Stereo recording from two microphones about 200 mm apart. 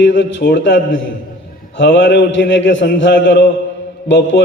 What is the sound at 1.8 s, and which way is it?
A man's voice, 60° left (ahead or behind).